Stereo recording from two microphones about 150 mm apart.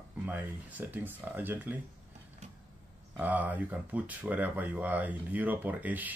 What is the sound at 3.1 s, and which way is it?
Speech, 10° right (ahead or behind).